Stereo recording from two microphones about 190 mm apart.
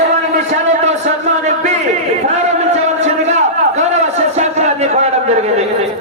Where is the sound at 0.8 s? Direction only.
35° right (ahead or behind).